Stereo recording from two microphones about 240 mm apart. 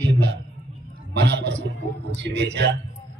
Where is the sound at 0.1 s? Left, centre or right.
Right.